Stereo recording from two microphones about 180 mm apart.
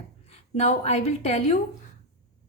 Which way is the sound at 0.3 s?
40° left (ahead or behind).